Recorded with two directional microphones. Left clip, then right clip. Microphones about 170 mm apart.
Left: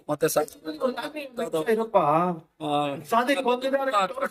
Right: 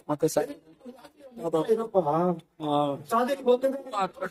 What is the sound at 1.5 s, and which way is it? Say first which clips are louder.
Speech: left 2 dB; 20° left (ahead or behind).